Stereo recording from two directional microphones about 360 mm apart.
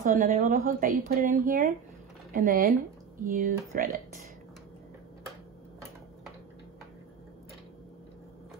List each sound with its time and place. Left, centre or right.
0.0 s speech: right